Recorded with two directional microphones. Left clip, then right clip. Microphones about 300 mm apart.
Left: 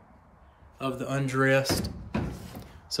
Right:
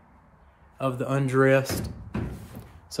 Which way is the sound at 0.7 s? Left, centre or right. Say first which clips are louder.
Right 4 dB; centre.